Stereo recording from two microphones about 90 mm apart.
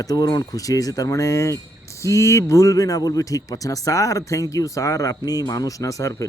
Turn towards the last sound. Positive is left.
turn(degrees=40)  # may be behind; listen again after turning